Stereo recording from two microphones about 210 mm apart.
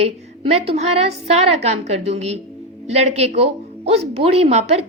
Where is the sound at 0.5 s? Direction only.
30° right (ahead or behind).